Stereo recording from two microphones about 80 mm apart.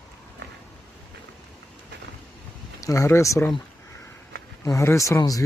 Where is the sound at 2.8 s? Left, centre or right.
Left.